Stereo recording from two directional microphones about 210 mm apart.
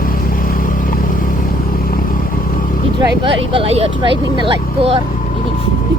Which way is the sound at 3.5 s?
30° right (ahead or behind).